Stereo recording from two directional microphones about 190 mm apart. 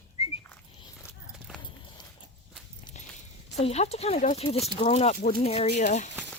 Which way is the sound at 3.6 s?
35° left (ahead or behind).